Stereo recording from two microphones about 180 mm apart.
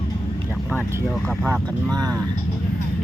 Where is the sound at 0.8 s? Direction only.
15° right (ahead or behind).